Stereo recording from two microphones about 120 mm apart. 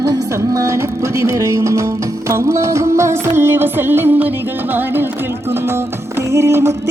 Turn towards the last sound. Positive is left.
turn(degrees=-20)  # may be behind; listen again after turning